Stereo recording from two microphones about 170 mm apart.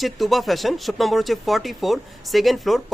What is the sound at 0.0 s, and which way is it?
Speech, centre (ahead or behind).